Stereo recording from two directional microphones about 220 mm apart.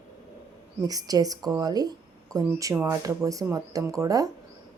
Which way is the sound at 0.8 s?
15° right (ahead or behind).